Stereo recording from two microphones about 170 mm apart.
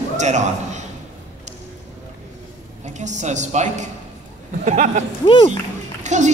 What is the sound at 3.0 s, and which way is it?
Speech, 45° right (ahead or behind).